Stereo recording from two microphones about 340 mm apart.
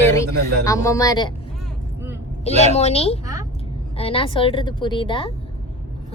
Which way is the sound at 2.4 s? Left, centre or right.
Centre.